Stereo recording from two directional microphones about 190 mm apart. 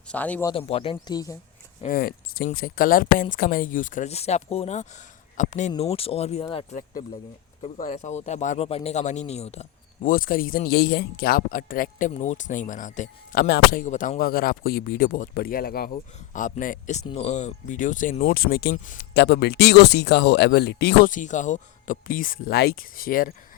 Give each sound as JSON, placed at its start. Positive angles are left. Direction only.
{"t": 0.1, "sound": "speech", "side_deg": 10}
{"t": 0.5, "sound": "speech", "side_deg": 30}
{"t": 1.8, "sound": "speech", "side_deg": 50}
{"t": 21.1, "sound": "speech", "side_deg": 40}